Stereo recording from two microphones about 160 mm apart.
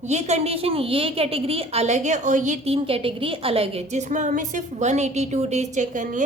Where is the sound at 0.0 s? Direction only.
45° right (ahead or behind).